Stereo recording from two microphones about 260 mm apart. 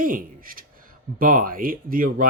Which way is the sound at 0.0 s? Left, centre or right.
Right.